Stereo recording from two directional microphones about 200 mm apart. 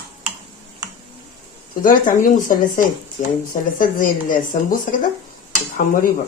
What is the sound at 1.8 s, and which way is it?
A woman's voice, 45° left (ahead or behind).